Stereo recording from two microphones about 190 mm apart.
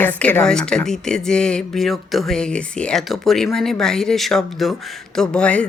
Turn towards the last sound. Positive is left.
turn(degrees=5)  # may be behind; listen again after turning